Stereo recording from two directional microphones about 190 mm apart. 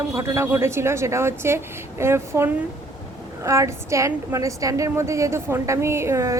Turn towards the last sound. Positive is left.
turn(degrees=-15)  # may be behind; listen again after turning